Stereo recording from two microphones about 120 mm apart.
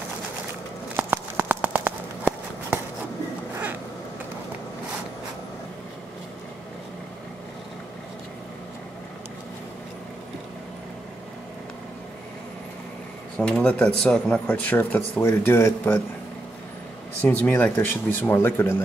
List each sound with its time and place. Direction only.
0.9 s a sound: 15° right (ahead or behind)
13.4 s speech: 10° left (ahead or behind)
17.2 s speech: 15° left (ahead or behind)